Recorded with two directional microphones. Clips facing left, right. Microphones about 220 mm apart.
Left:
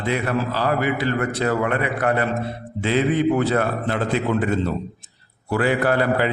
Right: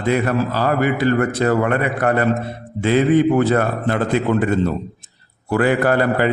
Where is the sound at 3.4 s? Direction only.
45° right (ahead or behind).